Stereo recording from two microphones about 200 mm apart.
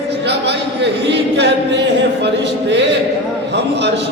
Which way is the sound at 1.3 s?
60° right (ahead or behind).